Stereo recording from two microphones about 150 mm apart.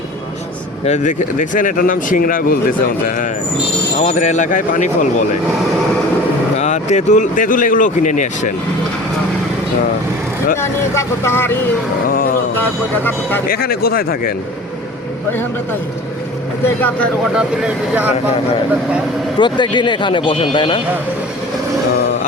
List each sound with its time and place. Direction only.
0.9 s speech: 55° left (ahead or behind)
3.9 s speech: 50° left (ahead or behind)
6.6 s speech: 50° left (ahead or behind)
10.6 s speech: 20° left (ahead or behind)
12.0 s speech: 70° left (ahead or behind)
13.5 s speech: 90° left
16.6 s speech: 10° left (ahead or behind)
17.3 s speech: 5° right (ahead or behind)
19.4 s speech: 30° left (ahead or behind)